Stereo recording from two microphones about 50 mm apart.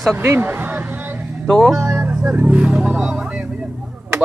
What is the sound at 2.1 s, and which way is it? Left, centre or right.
Music, centre.